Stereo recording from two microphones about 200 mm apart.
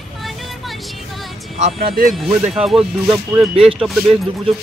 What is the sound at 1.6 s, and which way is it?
Speech, 30° right (ahead or behind).